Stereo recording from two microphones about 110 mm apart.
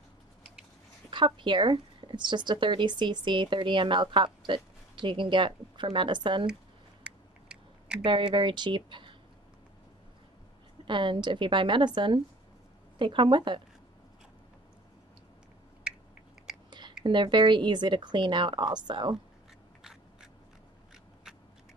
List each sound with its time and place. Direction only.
1.1 s speech: 45° right (ahead or behind)
7.0 s a sound: 10° right (ahead or behind)
8.0 s speech: 45° right (ahead or behind)
10.9 s speech: 45° right (ahead or behind)
17.0 s speech: 45° right (ahead or behind)
19.8 s biting: 5° right (ahead or behind)
20.9 s a sound: 5° right (ahead or behind)